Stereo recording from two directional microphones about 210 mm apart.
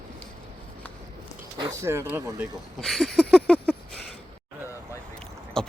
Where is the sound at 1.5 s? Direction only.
20° right (ahead or behind).